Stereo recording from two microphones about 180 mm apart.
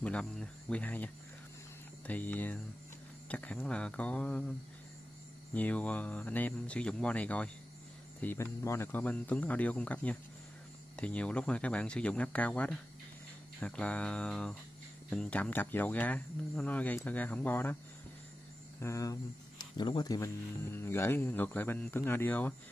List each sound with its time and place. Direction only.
0.0 s speech: 5° left (ahead or behind)
5.5 s speech: 10° left (ahead or behind)
18.8 s speech: 15° left (ahead or behind)